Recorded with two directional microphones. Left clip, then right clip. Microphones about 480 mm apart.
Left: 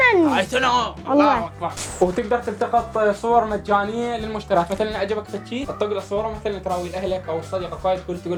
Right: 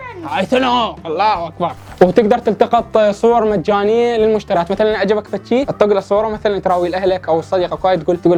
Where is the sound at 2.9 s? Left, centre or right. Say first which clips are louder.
Right 7 dB; right.